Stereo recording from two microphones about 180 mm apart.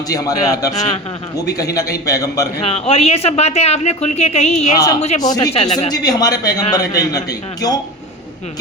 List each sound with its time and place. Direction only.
0.1 s a man's voice: 20° left (ahead or behind)
2.6 s speech: 35° left (ahead or behind)
5.2 s a man's voice: 20° left (ahead or behind)